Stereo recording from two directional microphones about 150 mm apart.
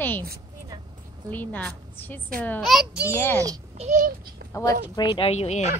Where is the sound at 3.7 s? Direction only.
50° right (ahead or behind).